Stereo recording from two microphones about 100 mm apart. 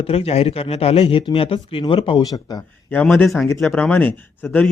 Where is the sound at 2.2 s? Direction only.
40° left (ahead or behind).